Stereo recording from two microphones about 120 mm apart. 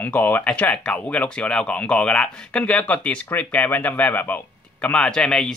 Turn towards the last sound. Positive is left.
turn(degrees=5)  # may be behind; listen again after turning